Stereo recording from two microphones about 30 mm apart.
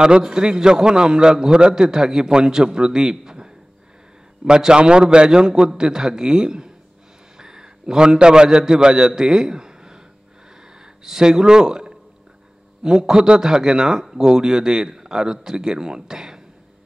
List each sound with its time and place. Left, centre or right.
0.0 s a man's voice: right
9.1 s a sound: centre
10.7 s a man's voice: right